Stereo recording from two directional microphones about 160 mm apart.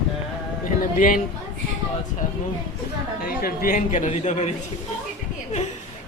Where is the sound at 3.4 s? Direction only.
60° left (ahead or behind); by 4.5 s 45° left (ahead or behind).